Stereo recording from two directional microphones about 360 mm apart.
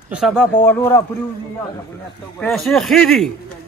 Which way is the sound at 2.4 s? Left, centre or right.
Centre.